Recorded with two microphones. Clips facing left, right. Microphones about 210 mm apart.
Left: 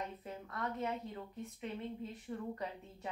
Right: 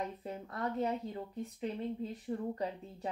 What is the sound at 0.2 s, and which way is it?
A woman's voice, 30° right (ahead or behind).